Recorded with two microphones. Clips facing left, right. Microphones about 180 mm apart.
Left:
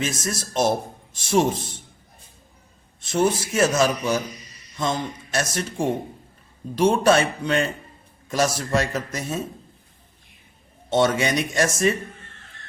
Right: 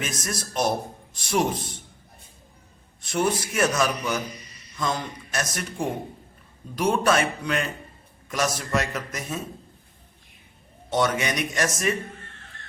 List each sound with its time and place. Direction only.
0.0 s a man's voice: 25° left (ahead or behind)
3.0 s a man's voice: 25° left (ahead or behind)
10.8 s a man's voice: 25° left (ahead or behind)